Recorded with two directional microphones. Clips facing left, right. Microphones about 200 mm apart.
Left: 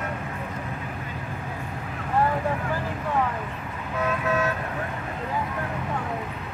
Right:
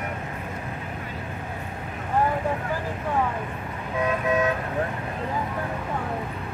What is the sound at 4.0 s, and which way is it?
Toot, 15° right (ahead or behind).